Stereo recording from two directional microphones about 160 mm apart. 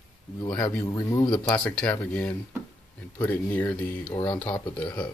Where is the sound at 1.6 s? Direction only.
5° left (ahead or behind).